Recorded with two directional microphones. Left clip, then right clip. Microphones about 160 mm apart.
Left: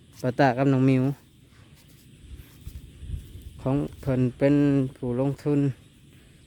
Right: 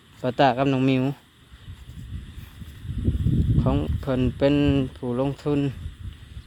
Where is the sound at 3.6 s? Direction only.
20° left (ahead or behind).